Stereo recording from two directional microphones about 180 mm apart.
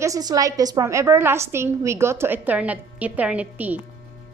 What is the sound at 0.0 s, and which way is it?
A woman's voice, 20° right (ahead or behind).